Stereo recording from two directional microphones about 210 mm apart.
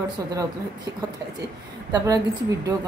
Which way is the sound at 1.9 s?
15° right (ahead or behind).